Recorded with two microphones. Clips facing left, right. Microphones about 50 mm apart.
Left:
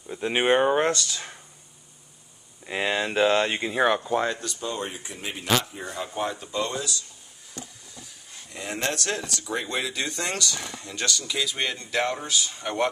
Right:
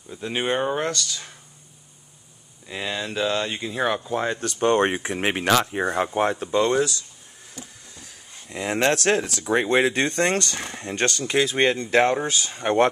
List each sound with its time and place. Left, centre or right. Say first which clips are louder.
0.1 s speech: left 3 dB; centre
2.6 s speech: left 3 dB; left
3.8 s speech: left 2 dB; centre
4.4 s speech: right 11 dB; right
8.5 s speech: right 8 dB; right